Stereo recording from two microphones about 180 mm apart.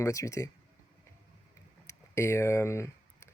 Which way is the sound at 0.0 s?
20° left (ahead or behind).